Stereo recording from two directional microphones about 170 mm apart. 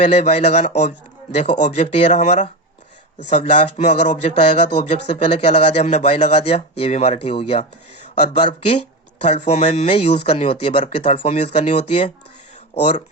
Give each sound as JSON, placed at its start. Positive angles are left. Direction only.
{"t": 0.0, "sound": "speech", "side_deg": 40}